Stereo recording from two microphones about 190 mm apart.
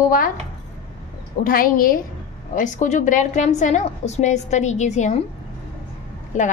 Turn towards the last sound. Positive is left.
turn(degrees=40)  # may be behind; listen again after turning